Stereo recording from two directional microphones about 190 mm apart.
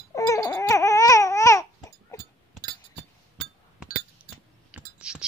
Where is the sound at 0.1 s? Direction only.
15° left (ahead or behind).